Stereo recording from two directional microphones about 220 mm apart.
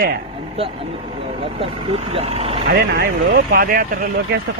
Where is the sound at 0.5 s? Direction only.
25° right (ahead or behind).